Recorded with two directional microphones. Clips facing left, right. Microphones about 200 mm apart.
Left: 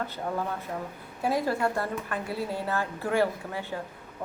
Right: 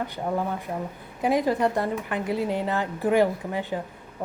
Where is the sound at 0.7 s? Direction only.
20° right (ahead or behind).